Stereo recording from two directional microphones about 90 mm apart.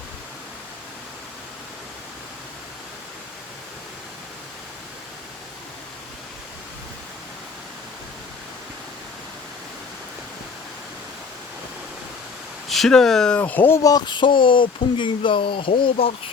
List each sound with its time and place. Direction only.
12.6 s speech: centre (ahead or behind)
13.4 s speech: 20° left (ahead or behind)
13.7 s a sound: 40° left (ahead or behind)
14.0 s speech: 60° left (ahead or behind); by 16.1 s 80° left